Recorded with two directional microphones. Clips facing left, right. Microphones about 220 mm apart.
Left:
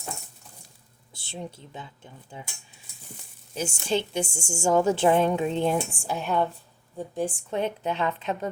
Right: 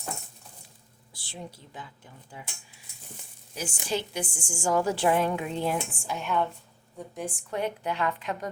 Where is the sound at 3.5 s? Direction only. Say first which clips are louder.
Left 4 dB; 25° left (ahead or behind).